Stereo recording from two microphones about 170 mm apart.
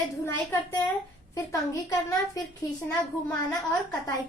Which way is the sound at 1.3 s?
20° left (ahead or behind).